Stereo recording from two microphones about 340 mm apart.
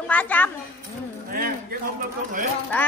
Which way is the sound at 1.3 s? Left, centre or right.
Right.